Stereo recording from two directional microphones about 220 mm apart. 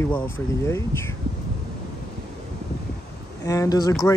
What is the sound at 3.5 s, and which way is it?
Speech, 15° left (ahead or behind).